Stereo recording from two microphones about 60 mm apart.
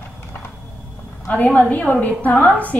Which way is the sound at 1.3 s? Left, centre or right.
Left.